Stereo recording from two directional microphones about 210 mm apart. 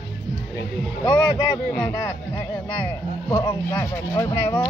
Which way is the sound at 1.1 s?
20° left (ahead or behind).